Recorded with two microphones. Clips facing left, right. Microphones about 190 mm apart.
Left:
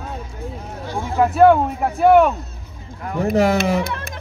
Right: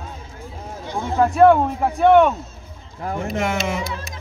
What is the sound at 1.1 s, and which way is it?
A man's voice, 5° left (ahead or behind).